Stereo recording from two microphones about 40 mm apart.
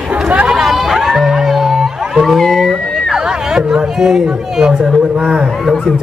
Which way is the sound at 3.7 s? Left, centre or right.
Centre.